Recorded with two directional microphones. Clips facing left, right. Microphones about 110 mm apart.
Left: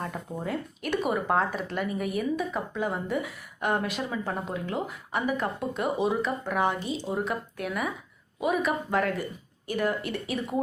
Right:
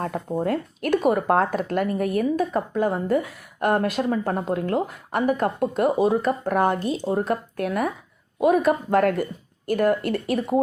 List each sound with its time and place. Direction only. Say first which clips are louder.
0.4 s speech: right 7 dB; 55° right (ahead or behind)